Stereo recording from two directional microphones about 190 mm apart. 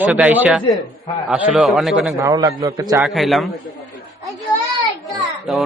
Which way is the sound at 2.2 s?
15° right (ahead or behind).